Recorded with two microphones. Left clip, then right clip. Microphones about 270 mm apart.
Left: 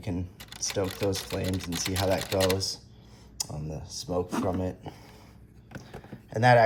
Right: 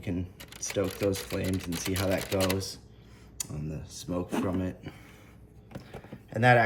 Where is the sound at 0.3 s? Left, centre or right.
Centre.